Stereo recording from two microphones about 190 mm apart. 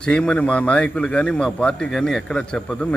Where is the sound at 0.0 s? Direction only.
5° left (ahead or behind).